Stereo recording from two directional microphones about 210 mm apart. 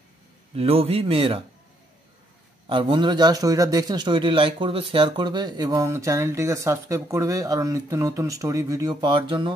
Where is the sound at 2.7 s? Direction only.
25° right (ahead or behind).